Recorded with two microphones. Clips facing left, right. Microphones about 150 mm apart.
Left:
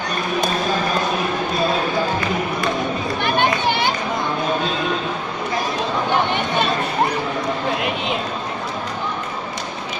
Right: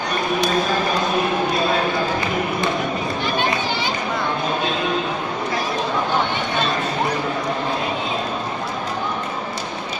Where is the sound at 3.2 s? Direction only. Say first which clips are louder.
Left 5 dB; 60° left (ahead or behind).